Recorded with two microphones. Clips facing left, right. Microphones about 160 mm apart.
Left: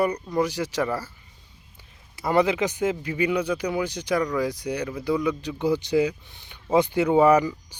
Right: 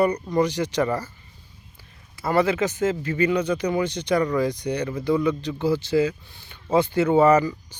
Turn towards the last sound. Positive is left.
turn(degrees=15)  # may be behind; listen again after turning